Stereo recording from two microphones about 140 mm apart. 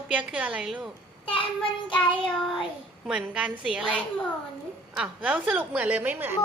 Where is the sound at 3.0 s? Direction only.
5° right (ahead or behind).